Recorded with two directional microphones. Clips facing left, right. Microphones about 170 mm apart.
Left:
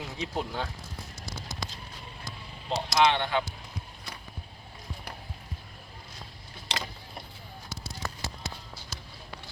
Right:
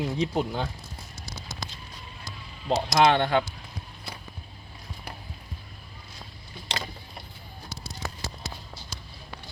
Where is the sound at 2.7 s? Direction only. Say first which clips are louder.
Right 4 dB; 45° right (ahead or behind).